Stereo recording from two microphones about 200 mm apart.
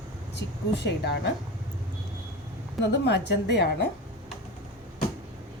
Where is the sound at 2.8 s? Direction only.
60° left (ahead or behind).